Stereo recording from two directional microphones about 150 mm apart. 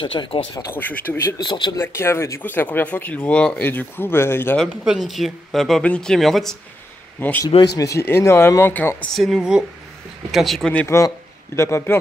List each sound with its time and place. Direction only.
0.0 s speech: 35° left (ahead or behind)
0.6 s speech: 10° left (ahead or behind)
1.4 s speech: 30° left (ahead or behind)
1.8 s speech: 15° left (ahead or behind)
4.6 s speech: centre (ahead or behind)
7.2 s speech: 15° left (ahead or behind)
7.4 s speech: 25° left (ahead or behind)
9.1 s speech: centre (ahead or behind)
11.0 s a man's voice: 20° left (ahead or behind)